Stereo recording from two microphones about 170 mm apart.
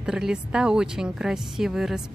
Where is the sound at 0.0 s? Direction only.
5° right (ahead or behind).